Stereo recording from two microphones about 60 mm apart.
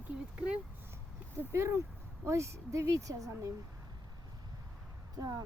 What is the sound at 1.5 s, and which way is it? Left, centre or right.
Speech, right.